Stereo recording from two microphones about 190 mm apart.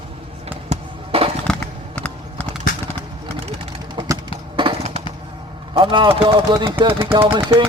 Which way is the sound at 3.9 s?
20° right (ahead or behind).